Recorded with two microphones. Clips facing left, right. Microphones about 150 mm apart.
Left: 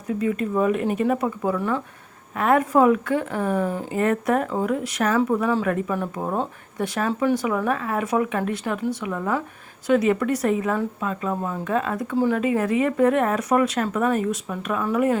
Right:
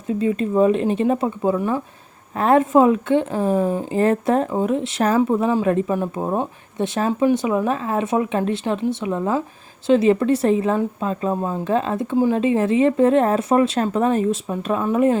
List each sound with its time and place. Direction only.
0.1 s speech: 25° right (ahead or behind)
2.3 s speech: 30° right (ahead or behind)
3.9 s speech: 30° right (ahead or behind)